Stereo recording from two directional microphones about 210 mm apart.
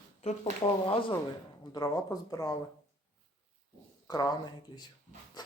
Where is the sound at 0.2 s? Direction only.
30° left (ahead or behind).